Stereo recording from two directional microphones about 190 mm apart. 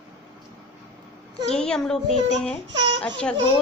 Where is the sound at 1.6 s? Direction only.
5° left (ahead or behind).